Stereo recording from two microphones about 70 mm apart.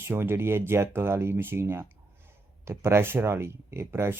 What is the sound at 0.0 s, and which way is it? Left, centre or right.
Speech, right.